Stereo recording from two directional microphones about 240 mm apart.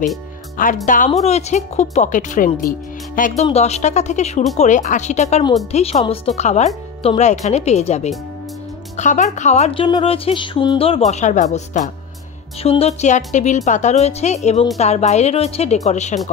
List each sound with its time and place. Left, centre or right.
0.8 s a woman's voice: left